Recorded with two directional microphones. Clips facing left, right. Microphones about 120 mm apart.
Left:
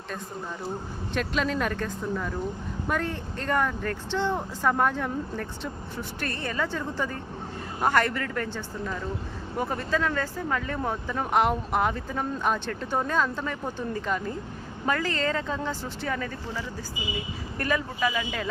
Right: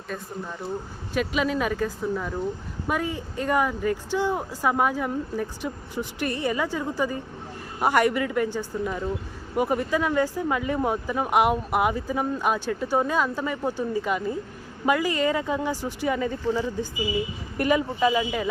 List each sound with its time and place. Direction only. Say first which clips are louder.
1.1 s speech: right 3 dB; 5° right (ahead or behind)